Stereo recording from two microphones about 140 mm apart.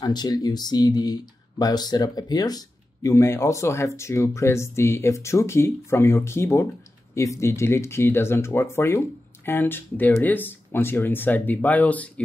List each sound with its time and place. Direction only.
0.0 s speech: 30° left (ahead or behind); by 12.1 s 10° left (ahead or behind)